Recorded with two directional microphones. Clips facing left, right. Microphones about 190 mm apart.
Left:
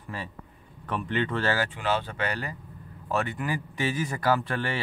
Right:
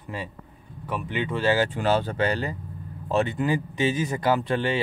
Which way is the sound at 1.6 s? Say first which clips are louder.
Right 5 dB; 40° right (ahead or behind).